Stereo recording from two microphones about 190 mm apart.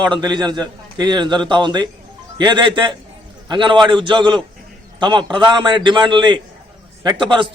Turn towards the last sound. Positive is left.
turn(degrees=-25)  # may be behind; listen again after turning